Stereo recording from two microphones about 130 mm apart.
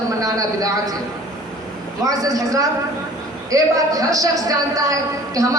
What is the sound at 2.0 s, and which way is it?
A man's voice, 25° right (ahead or behind).